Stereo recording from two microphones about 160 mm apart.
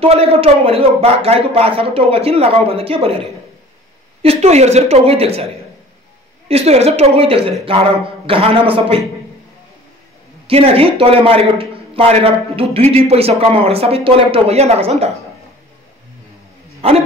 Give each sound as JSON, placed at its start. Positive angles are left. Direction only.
{"t": 0.0, "sound": "a man's voice", "side_deg": -40}
{"t": 4.2, "sound": "a man's voice", "side_deg": -40}
{"t": 6.5, "sound": "a man's voice", "side_deg": -40}
{"t": 10.4, "sound": "a man's voice", "side_deg": -35}
{"t": 16.8, "sound": "a man's voice", "side_deg": -40}